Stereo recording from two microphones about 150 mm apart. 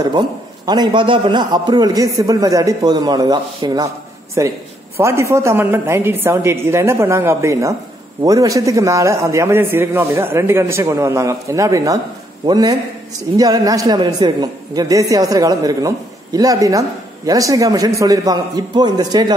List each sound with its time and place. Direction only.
0.7 s a man's voice: 30° right (ahead or behind)